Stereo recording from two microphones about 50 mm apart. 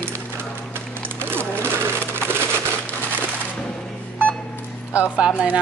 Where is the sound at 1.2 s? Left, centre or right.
Right.